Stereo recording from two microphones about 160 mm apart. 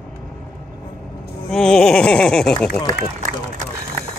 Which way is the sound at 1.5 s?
5° left (ahead or behind).